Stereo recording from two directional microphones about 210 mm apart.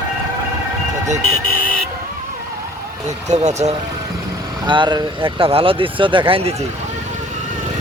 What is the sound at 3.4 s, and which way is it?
Speech, 30° right (ahead or behind).